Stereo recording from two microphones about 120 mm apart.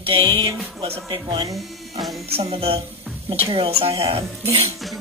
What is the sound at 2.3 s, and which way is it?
Speech, 55° right (ahead or behind).